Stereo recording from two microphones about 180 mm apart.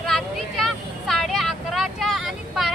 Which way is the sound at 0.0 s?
Centre (ahead or behind).